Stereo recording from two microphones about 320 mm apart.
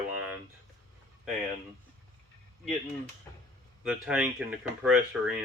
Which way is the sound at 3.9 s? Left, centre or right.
Centre.